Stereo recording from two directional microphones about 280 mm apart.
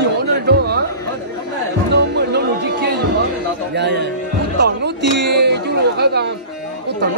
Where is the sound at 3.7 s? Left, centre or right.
Right.